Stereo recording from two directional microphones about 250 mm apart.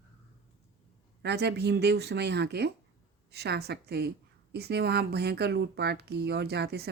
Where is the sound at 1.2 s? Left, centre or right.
Right.